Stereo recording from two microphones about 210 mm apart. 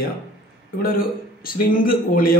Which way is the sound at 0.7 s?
45° left (ahead or behind).